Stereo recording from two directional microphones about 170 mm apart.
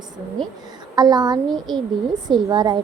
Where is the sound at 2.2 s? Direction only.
25° right (ahead or behind).